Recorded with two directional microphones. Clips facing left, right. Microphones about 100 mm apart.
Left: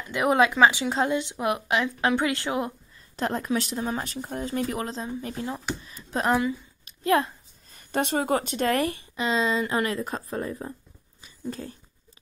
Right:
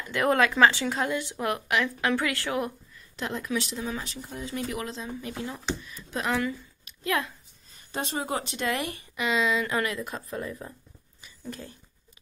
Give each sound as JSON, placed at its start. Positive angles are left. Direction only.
{"t": 0.1, "sound": "a woman's voice", "side_deg": 15}
{"t": 3.2, "sound": "speech", "side_deg": 40}
{"t": 6.8, "sound": "a sound", "side_deg": 35}
{"t": 7.7, "sound": "a woman's voice", "side_deg": 60}
{"t": 8.9, "sound": "speech", "side_deg": 30}